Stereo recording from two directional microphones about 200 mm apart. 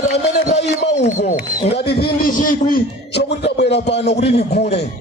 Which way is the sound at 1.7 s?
55° left (ahead or behind).